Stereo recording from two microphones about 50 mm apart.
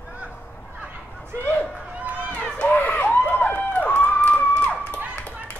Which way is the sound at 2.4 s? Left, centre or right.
Left.